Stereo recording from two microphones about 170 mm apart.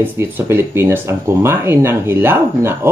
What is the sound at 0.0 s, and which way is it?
Speech, 10° right (ahead or behind).